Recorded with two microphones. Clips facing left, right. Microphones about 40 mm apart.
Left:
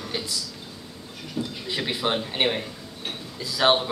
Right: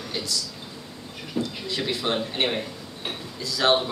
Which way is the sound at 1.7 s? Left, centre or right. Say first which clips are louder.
Left 1 dB; centre.